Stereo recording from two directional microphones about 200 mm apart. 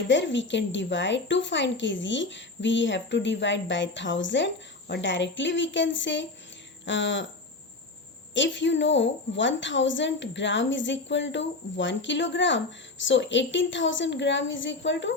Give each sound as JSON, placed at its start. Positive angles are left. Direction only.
{"t": 0.1, "sound": "a woman's voice", "side_deg": 65}
{"t": 8.3, "sound": "a woman's voice", "side_deg": 65}